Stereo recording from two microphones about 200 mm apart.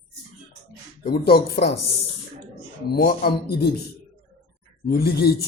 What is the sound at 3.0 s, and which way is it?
Speech, 50° left (ahead or behind).